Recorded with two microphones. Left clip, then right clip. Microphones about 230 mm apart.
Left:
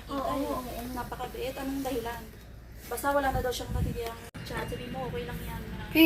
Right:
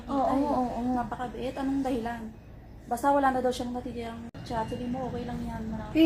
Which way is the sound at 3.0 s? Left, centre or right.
Right.